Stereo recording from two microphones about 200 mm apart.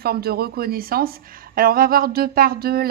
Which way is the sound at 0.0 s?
50° right (ahead or behind).